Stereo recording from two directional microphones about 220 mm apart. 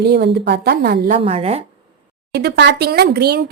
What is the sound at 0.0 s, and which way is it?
Speech, 50° right (ahead or behind).